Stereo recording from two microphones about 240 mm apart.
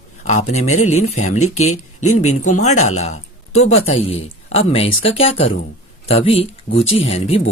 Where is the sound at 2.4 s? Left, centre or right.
Left.